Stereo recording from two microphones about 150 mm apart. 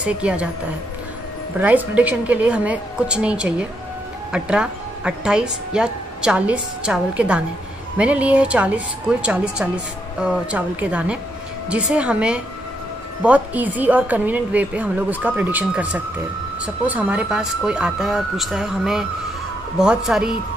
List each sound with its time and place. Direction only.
0.0 s a woman's voice: 10° right (ahead or behind)
1.6 s a woman's voice: 10° right (ahead or behind)